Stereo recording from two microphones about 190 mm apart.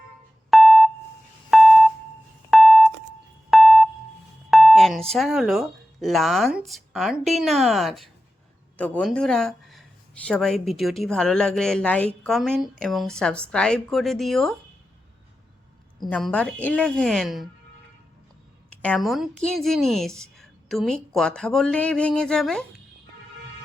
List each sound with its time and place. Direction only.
0.5 s beep: centre (ahead or behind)
1.5 s a sound: centre (ahead or behind)
5.1 s speech: centre (ahead or behind)
16.0 s speech: 5° left (ahead or behind)
18.8 s speech: 5° left (ahead or behind)